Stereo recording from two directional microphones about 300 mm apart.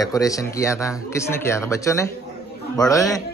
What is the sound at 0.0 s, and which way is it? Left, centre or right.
Speech, centre.